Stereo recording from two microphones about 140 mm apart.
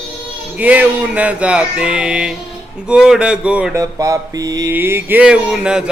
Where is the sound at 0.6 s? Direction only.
10° right (ahead or behind).